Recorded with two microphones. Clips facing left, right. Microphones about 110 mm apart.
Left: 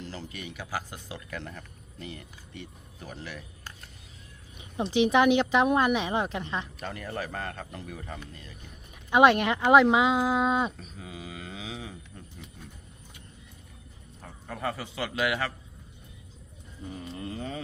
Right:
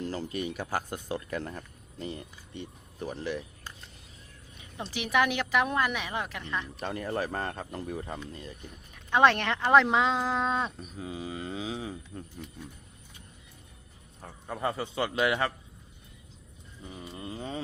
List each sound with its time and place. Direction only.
0.0 s a man's voice: 45° right (ahead or behind)
4.5 s speech: 20° left (ahead or behind)
6.7 s speech: 35° right (ahead or behind)
9.0 s speech: 10° left (ahead or behind)
11.0 s speech: 30° right (ahead or behind)
14.4 s a man's voice: 20° right (ahead or behind)
17.1 s a man's voice: 15° right (ahead or behind)